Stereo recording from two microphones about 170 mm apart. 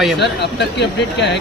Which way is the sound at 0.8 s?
90° left.